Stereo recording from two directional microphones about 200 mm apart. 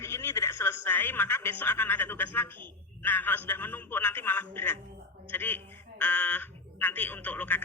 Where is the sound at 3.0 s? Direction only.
10° left (ahead or behind).